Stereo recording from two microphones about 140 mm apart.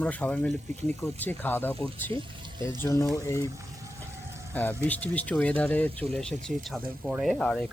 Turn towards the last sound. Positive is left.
turn(degrees=10)  # may be behind; listen again after turning